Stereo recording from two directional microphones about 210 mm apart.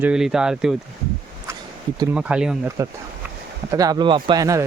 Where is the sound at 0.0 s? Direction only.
5° right (ahead or behind).